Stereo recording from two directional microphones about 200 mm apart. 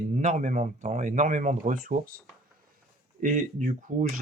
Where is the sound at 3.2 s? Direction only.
45° right (ahead or behind).